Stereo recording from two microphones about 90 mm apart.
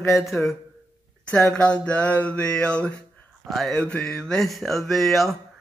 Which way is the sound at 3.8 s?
10° left (ahead or behind).